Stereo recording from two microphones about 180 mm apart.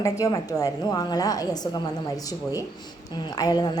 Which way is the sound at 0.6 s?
20° left (ahead or behind).